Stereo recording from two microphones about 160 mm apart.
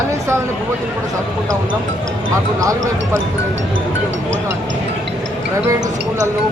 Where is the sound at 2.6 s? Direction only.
20° right (ahead or behind).